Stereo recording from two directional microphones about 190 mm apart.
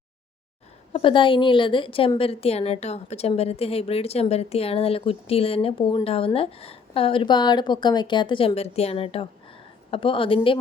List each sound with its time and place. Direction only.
0.9 s a woman's voice: 25° left (ahead or behind)